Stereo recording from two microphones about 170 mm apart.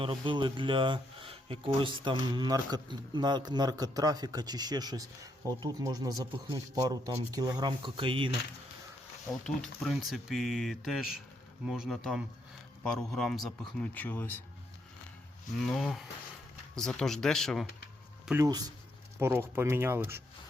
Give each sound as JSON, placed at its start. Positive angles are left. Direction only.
{"t": 0.0, "sound": "speech", "side_deg": -30}
{"t": 9.6, "sound": "a man's voice", "side_deg": 0}
{"t": 15.6, "sound": "a man's voice", "side_deg": 0}